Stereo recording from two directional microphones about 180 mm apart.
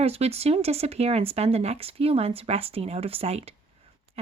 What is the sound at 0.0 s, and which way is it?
Speech, 35° right (ahead or behind).